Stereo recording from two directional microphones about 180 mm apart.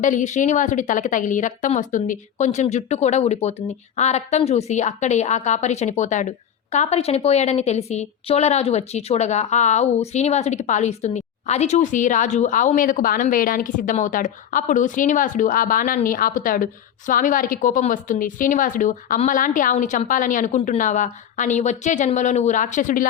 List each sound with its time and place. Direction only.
0.0 s a woman's voice: 45° left (ahead or behind)